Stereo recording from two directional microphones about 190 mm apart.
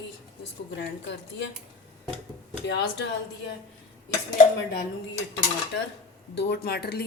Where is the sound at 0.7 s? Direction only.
65° left (ahead or behind).